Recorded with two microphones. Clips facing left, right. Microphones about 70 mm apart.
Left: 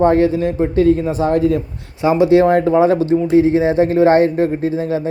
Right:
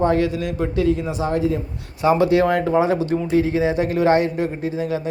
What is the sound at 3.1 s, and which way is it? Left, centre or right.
Speech, left.